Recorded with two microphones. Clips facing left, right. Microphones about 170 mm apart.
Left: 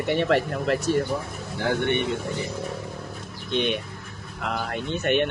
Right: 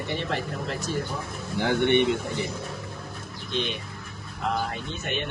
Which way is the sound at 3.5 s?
65° left (ahead or behind).